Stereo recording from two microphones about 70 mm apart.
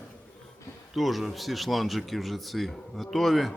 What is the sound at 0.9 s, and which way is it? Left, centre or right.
Speech, centre.